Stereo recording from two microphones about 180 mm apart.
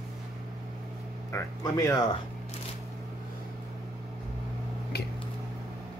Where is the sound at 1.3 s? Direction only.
15° left (ahead or behind).